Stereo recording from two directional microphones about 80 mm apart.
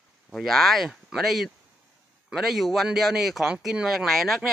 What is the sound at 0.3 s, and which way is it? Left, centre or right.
Speech, centre.